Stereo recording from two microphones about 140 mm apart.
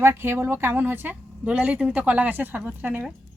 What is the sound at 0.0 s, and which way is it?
Speech, 15° right (ahead or behind).